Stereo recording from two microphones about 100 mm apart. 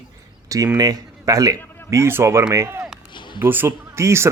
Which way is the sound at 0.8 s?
40° right (ahead or behind).